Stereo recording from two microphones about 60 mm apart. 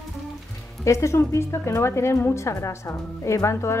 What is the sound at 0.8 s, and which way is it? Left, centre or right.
A woman's voice, left.